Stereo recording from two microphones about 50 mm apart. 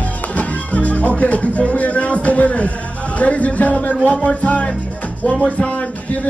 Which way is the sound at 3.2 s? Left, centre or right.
Left.